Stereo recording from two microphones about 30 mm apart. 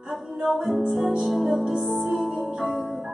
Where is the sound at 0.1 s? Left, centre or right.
Centre.